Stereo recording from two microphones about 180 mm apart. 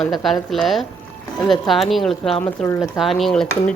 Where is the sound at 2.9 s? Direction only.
Centre (ahead or behind).